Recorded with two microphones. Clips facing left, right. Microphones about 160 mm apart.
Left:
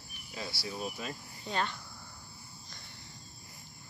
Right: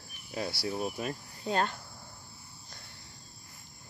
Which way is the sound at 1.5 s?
40° right (ahead or behind).